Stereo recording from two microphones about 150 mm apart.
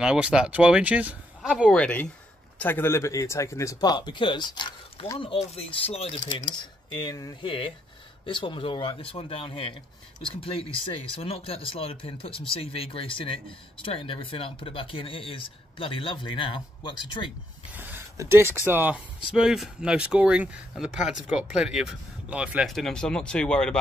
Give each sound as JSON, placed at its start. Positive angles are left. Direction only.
{"t": 0.0, "sound": "speech", "side_deg": -5}
{"t": 1.8, "sound": "speech", "side_deg": 10}
{"t": 5.2, "sound": "speech", "side_deg": 40}
{"t": 6.9, "sound": "speech", "side_deg": 30}
{"t": 17.7, "sound": "a sound", "side_deg": -15}
{"t": 18.7, "sound": "speech", "side_deg": -10}